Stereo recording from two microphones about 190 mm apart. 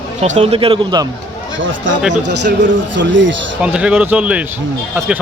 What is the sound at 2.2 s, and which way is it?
Speech, 70° right (ahead or behind).